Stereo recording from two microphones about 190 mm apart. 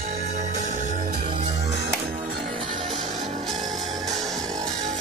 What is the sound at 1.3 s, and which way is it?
Music, 25° right (ahead or behind).